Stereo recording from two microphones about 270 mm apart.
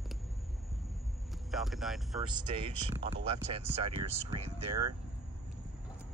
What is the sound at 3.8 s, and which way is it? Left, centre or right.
Speech, right.